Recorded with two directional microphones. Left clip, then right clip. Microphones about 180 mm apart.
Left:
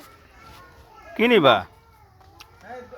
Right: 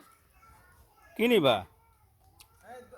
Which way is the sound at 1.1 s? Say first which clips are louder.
Left 8 dB; 25° right (ahead or behind).